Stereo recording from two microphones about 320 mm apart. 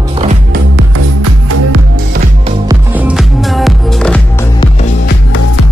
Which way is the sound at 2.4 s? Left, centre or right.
Centre.